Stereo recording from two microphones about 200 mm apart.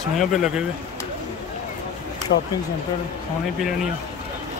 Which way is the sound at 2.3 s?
55° left (ahead or behind).